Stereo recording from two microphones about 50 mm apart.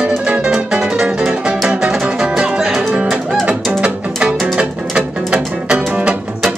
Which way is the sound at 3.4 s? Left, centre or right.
Right.